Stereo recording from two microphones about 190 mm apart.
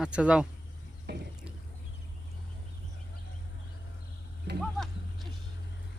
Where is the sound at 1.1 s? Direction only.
60° right (ahead or behind).